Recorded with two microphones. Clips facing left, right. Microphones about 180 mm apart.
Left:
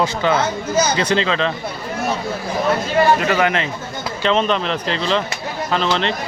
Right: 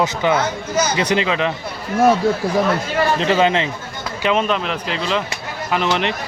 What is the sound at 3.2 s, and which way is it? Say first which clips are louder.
Speech: right 2 dB; 25° right (ahead or behind).